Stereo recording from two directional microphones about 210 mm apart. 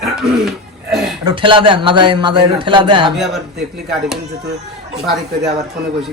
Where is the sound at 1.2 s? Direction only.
20° right (ahead or behind).